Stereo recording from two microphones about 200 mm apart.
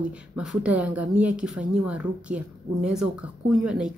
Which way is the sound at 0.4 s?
5° right (ahead or behind).